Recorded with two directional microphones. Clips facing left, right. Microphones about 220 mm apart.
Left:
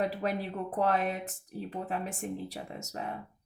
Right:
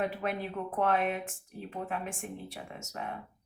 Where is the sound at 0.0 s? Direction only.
35° left (ahead or behind).